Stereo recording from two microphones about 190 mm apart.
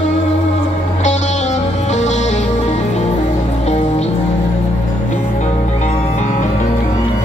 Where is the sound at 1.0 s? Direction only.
40° left (ahead or behind).